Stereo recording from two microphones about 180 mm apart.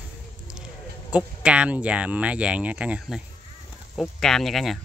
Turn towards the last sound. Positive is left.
turn(degrees=0)  # may be behind; listen again after turning